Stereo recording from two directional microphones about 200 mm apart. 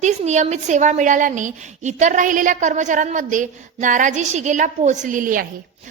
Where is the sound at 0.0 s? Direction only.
35° right (ahead or behind).